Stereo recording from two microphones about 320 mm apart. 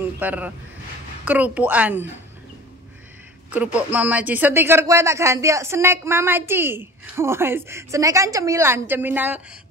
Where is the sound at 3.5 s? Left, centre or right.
Centre.